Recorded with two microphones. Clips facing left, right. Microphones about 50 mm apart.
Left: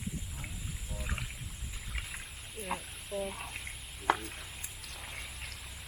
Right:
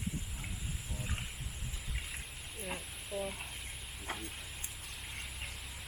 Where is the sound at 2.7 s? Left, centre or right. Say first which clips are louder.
Left 4 dB; centre.